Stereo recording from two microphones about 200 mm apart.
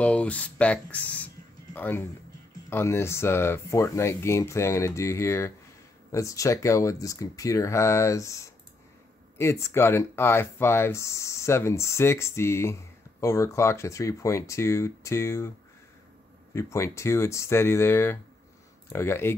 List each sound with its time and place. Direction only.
0.0 s speech: 5° left (ahead or behind)
16.5 s speech: 15° left (ahead or behind)